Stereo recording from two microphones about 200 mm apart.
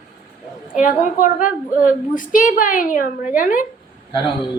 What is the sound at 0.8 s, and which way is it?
A woman's voice, 40° left (ahead or behind).